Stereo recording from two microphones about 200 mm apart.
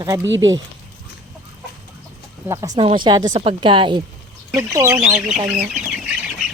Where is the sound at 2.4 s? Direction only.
15° right (ahead or behind).